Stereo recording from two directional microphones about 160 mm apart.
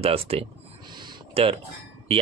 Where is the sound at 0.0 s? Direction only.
35° right (ahead or behind).